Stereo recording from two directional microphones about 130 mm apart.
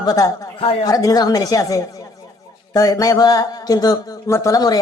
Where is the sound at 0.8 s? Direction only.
30° left (ahead or behind).